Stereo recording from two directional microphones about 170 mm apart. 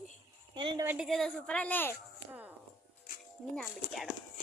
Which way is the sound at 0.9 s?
5° right (ahead or behind).